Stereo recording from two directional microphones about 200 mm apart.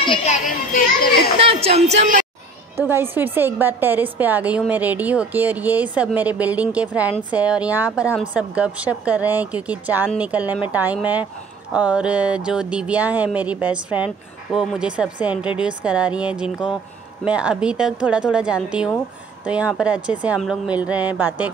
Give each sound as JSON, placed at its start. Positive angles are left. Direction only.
{"t": 1.4, "sound": "a woman's voice", "side_deg": -30}
{"t": 2.8, "sound": "a woman's voice", "side_deg": -10}